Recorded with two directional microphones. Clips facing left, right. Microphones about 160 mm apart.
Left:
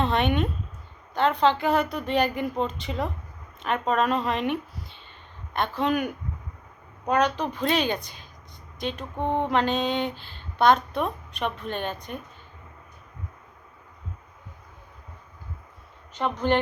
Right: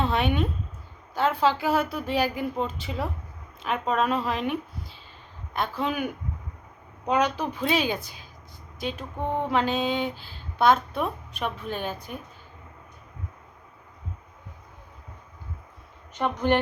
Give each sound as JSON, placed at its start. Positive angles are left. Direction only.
{"t": 0.0, "sound": "a woman's voice", "side_deg": 0}
{"t": 7.1, "sound": "a woman's voice", "side_deg": -10}
{"t": 9.1, "sound": "a sound", "side_deg": 20}
{"t": 9.5, "sound": "a woman's voice", "side_deg": -5}
{"t": 16.1, "sound": "a woman's voice", "side_deg": -15}